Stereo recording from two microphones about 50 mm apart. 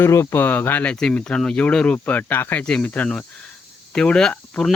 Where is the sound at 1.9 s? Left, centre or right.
Left.